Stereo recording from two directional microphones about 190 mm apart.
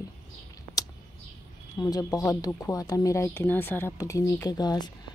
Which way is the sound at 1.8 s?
20° left (ahead or behind).